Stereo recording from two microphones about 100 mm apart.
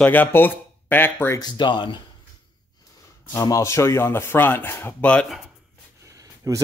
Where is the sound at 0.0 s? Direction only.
20° left (ahead or behind).